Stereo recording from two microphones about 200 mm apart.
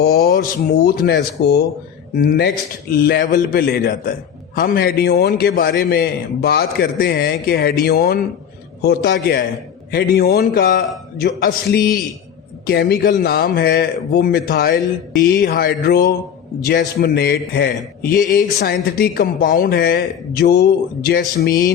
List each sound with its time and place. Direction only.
0.0 s a man's voice: 50° left (ahead or behind)